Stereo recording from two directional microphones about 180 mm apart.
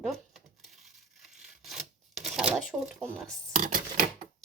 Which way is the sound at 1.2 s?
Centre (ahead or behind).